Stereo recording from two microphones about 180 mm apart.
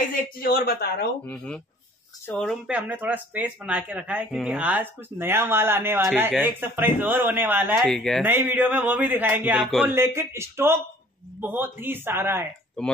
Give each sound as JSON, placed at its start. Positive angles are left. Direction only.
{"t": 0.4, "sound": "speech", "side_deg": 55}
{"t": 1.2, "sound": "speech", "side_deg": 5}
{"t": 2.6, "sound": "speech", "side_deg": -10}
{"t": 7.7, "sound": "speech", "side_deg": 0}
{"t": 8.2, "sound": "speech", "side_deg": -10}
{"t": 9.8, "sound": "speech", "side_deg": -15}
{"t": 12.8, "sound": "speech", "side_deg": 5}